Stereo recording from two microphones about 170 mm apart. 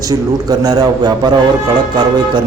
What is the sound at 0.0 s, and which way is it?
A man's voice, 20° right (ahead or behind).